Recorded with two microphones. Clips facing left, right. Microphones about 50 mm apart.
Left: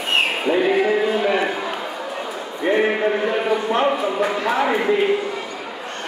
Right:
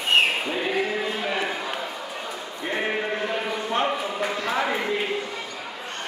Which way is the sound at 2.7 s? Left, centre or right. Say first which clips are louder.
Left 7 dB; left.